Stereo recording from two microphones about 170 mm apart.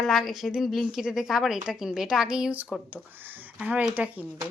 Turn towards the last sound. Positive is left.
turn(degrees=-10)  # may be behind; listen again after turning